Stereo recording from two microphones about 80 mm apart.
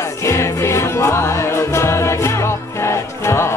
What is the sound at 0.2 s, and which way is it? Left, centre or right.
Music, left.